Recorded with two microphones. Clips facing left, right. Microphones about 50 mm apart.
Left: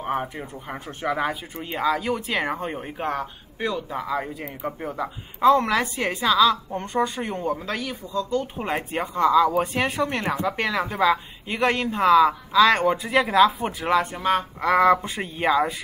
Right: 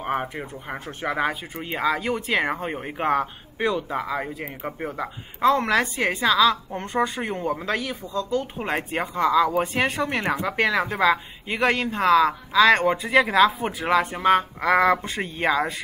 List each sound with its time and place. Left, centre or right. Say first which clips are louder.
0.0 s speech: even; right
3.0 s a woman's voice: right 6 dB; right; by 10.0 s centre
10.0 s a woman's voice: even; centre